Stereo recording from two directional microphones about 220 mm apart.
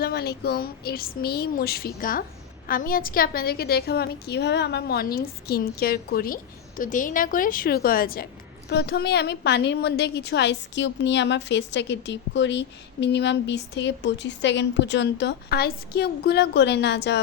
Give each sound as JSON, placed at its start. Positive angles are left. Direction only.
{"t": 0.0, "sound": "a woman's voice", "side_deg": 45}